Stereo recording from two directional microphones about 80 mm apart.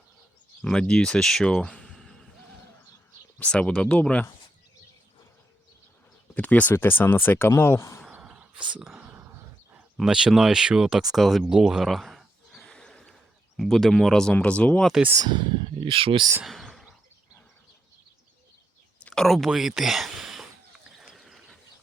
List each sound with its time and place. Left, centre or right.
0.6 s speech: centre
3.3 s speech: centre
6.3 s speech: centre; by 8.0 s left
8.2 s a sound: centre
8.7 s speech: centre
9.0 s a sound: right
10.0 s speech: centre
12.7 s horse: centre
13.6 s speech: centre
15.2 s speech: right
16.4 s a sound: centre
19.1 s speech: centre
21.0 s a sound: centre